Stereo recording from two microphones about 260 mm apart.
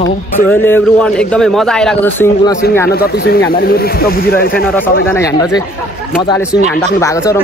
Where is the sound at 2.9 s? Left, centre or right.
Left.